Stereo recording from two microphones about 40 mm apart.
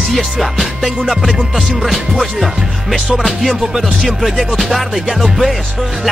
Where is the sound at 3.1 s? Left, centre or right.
Centre.